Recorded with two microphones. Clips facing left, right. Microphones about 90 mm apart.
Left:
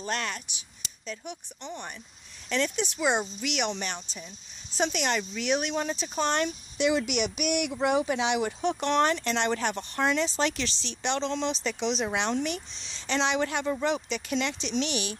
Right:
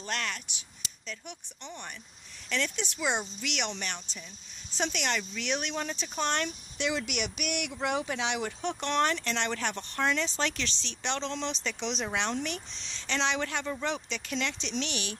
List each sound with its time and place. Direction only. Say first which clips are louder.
0.0 s speech: left 3 dB; 20° left (ahead or behind)